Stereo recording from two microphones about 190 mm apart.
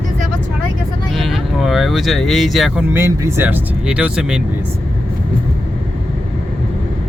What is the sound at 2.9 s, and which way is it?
Speech, 15° right (ahead or behind).